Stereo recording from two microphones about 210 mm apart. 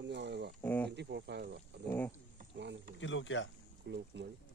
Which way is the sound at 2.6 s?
55° right (ahead or behind).